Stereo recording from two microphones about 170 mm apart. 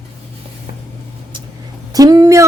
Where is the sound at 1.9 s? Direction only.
20° right (ahead or behind).